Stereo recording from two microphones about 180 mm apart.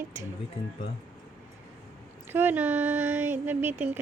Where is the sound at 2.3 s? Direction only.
10° right (ahead or behind).